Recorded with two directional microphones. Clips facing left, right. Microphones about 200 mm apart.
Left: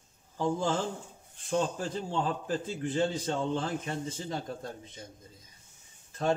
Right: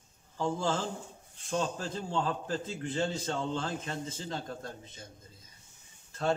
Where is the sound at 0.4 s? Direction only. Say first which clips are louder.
Left 2 dB; 15° left (ahead or behind).